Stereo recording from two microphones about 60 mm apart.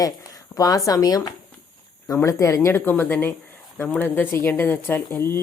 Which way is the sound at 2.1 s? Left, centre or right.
Left.